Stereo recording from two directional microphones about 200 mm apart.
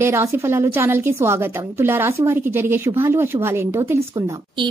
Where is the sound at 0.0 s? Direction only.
15° right (ahead or behind).